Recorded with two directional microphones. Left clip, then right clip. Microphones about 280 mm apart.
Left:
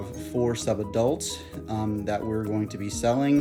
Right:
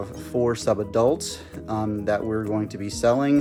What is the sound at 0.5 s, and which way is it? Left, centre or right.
Speech, centre.